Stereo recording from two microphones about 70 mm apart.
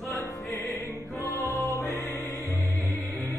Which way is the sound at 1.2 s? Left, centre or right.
Right.